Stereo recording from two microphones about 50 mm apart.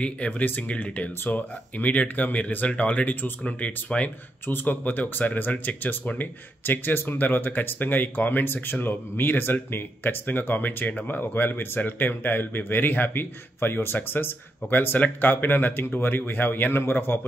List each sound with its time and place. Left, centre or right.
0.0 s speech: left
4.5 s speech: left